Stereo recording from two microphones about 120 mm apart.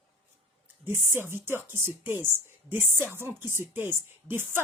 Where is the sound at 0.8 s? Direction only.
20° right (ahead or behind).